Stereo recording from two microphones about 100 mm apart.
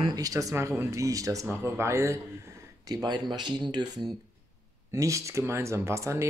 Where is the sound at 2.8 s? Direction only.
40° right (ahead or behind).